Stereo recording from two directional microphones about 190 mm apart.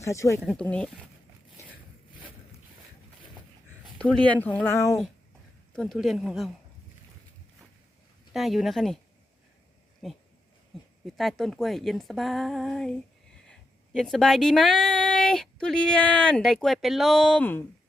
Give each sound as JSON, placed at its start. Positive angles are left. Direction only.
{"t": 0.0, "sound": "speech", "side_deg": 15}
{"t": 0.4, "sound": "speech", "side_deg": 5}
{"t": 3.9, "sound": "speech", "side_deg": 5}
{"t": 5.7, "sound": "speech", "side_deg": 0}
{"t": 8.3, "sound": "speech", "side_deg": 0}
{"t": 10.0, "sound": "speech", "side_deg": 0}